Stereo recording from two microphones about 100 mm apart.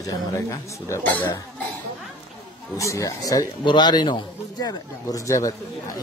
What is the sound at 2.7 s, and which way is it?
Speech, 30° left (ahead or behind).